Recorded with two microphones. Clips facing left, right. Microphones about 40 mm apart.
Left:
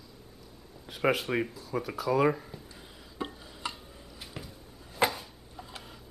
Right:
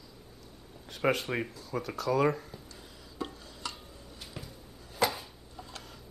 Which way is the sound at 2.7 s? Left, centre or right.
Left.